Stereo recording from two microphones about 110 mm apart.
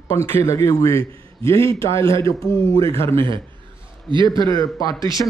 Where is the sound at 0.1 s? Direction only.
25° left (ahead or behind).